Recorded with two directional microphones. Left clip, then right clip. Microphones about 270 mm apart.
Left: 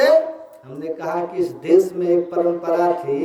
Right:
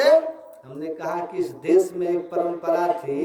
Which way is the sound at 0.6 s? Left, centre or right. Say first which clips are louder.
Left 3 dB; centre.